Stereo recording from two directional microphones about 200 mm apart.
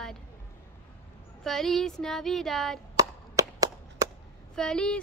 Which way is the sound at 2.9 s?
15° right (ahead or behind).